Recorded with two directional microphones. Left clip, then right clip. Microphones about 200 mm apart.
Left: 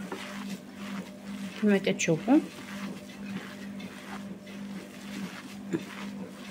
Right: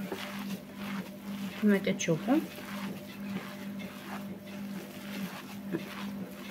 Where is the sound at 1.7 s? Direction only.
25° left (ahead or behind).